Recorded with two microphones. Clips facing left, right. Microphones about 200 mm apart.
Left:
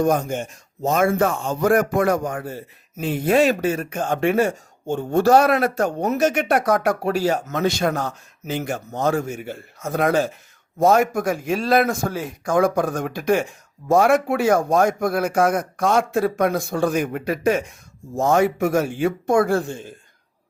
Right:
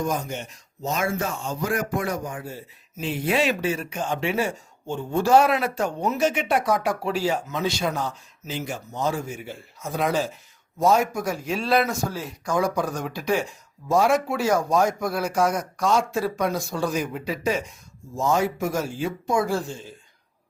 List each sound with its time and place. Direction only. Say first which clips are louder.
0.0 s speech: left 7 dB; 60° left (ahead or behind)
6.7 s speech: left 4 dB; 55° left (ahead or behind)